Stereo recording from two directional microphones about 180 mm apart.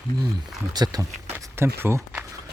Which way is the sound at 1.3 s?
10° right (ahead or behind).